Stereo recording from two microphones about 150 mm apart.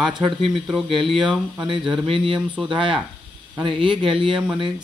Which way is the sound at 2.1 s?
35° right (ahead or behind).